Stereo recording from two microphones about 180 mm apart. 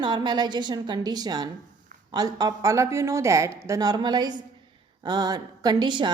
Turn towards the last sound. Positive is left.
turn(degrees=-25)  # may be behind; listen again after turning